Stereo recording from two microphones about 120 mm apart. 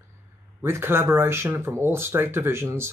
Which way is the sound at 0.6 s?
20° right (ahead or behind).